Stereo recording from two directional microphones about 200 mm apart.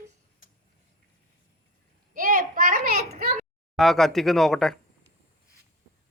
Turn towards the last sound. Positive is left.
turn(degrees=0)  # may be behind; listen again after turning